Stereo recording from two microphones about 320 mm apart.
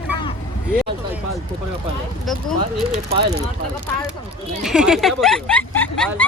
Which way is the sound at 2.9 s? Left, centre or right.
Centre.